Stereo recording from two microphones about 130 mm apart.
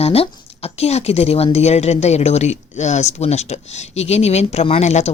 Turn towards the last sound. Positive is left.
turn(degrees=60)  # may be behind; listen again after turning